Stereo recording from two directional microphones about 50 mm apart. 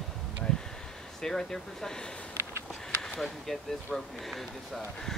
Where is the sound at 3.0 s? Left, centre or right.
Centre.